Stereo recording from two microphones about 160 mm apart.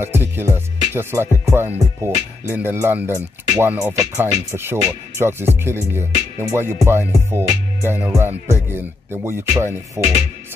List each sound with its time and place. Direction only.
0.0 s music: 15° right (ahead or behind)